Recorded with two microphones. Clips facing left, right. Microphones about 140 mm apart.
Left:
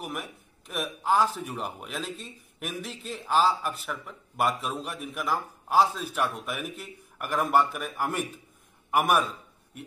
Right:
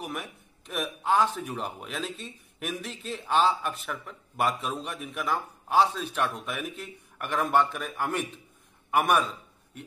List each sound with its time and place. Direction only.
0.0 s a man's voice: centre (ahead or behind)